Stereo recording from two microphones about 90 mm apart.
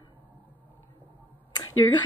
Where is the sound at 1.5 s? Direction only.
50° left (ahead or behind).